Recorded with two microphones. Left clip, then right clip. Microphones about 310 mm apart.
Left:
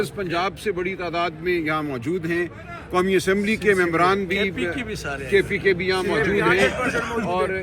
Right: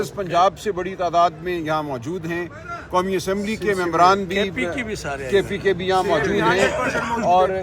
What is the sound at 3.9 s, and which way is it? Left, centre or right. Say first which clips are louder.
Speech: right 4 dB; centre.